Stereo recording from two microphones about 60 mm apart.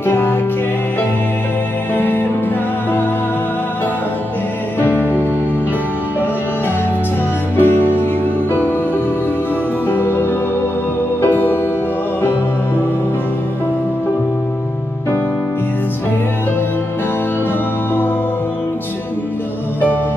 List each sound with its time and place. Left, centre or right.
0.0 s music: left
2.0 s music: left
4.7 s music: left
7.5 s music: left
9.8 s music: left